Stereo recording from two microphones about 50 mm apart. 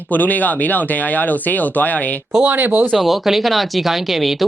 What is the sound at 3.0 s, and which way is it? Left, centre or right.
Speech, centre.